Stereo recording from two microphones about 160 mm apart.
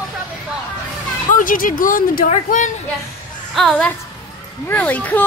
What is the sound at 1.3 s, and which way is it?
Speech, 60° left (ahead or behind).